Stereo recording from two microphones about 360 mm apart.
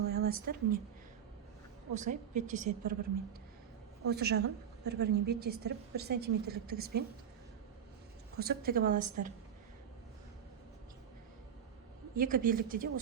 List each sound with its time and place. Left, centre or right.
0.1 s speech: right
1.9 s a woman's voice: centre
4.0 s a woman's voice: right
8.4 s a woman's voice: right
12.1 s a woman's voice: right